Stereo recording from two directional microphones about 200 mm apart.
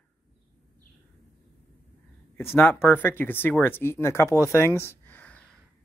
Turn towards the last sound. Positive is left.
turn(degrees=5)  # may be behind; listen again after turning